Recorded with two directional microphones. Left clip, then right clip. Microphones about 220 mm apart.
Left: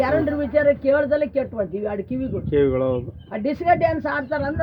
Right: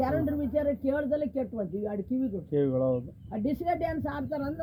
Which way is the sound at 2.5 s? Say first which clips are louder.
Left 8 dB; 20° left (ahead or behind).